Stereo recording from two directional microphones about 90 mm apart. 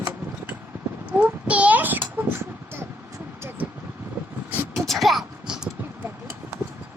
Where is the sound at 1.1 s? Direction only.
15° right (ahead or behind).